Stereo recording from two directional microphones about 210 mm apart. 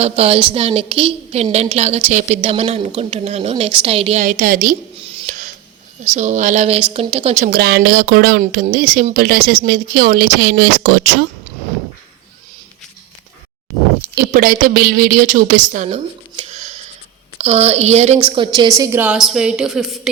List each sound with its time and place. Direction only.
0.0 s a woman's voice: 30° right (ahead or behind)
4.9 s a sound: 25° right (ahead or behind)
6.1 s a woman's voice: 35° right (ahead or behind)
7.4 s speech: 50° right (ahead or behind)
14.3 s speech: 45° right (ahead or behind)
15.7 s a sound: 35° right (ahead or behind)
17.3 s a woman's voice: 30° right (ahead or behind)
18.8 s a woman's voice: 10° right (ahead or behind)